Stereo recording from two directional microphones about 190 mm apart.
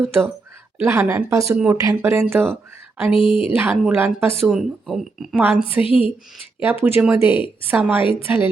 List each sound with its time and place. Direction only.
0.0 s speech: 10° right (ahead or behind)
3.1 s speech: 30° left (ahead or behind)
3.6 s speech: 10° right (ahead or behind)
5.8 s speech: 30° left (ahead or behind)
6.6 s a woman's voice: 10° right (ahead or behind)